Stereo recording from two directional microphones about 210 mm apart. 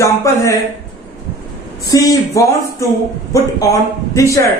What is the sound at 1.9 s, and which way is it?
Speech, 15° left (ahead or behind).